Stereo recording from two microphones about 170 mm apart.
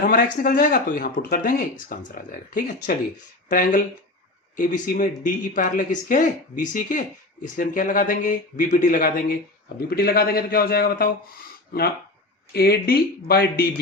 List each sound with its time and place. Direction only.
0.0 s a man's voice: 50° left (ahead or behind)
12.5 s a man's voice: 65° left (ahead or behind)